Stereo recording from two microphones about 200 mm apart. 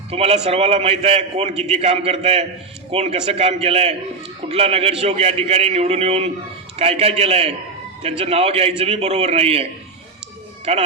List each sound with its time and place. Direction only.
0.1 s a man's voice: 30° right (ahead or behind)
10.7 s a man's voice: 30° right (ahead or behind)